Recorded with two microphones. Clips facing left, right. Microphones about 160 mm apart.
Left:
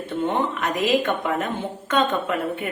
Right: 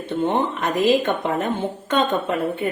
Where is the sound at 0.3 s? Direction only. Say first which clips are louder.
Right 1 dB; 30° right (ahead or behind).